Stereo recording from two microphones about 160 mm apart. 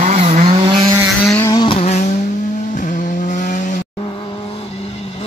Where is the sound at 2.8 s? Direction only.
55° left (ahead or behind).